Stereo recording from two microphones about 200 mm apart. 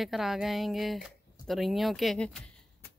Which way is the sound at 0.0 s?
Centre (ahead or behind).